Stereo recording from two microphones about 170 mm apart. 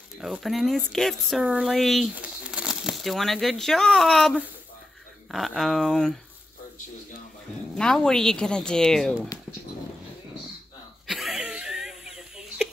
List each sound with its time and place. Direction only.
0.2 s speech: centre (ahead or behind)
7.7 s speech: 5° left (ahead or behind)
11.1 s wheeze: centre (ahead or behind)